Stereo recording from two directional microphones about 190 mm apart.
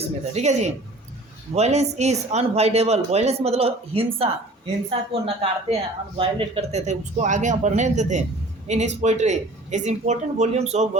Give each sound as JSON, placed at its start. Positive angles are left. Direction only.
{"t": 0.0, "sound": "speech", "side_deg": -35}